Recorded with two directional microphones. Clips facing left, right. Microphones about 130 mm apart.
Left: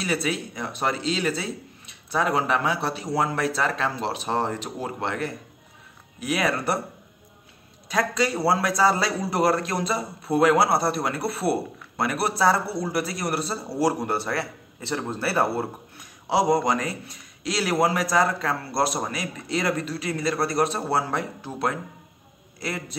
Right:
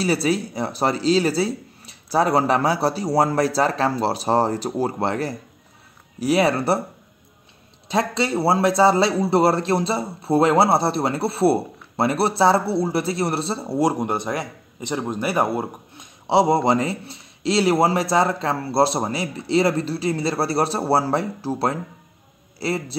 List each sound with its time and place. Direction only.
0.0 s speech: 35° right (ahead or behind)
7.9 s a man's voice: 25° right (ahead or behind)